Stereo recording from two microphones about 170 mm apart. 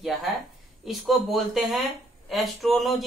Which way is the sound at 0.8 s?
Centre (ahead or behind).